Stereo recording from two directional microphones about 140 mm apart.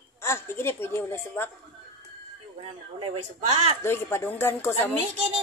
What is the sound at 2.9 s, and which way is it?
Speech, 40° right (ahead or behind).